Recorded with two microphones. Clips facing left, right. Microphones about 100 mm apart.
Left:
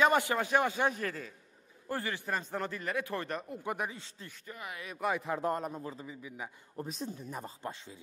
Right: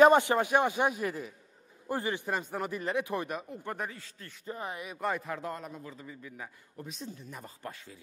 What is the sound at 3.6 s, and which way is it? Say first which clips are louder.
Speech: left 4 dB; 15° left (ahead or behind).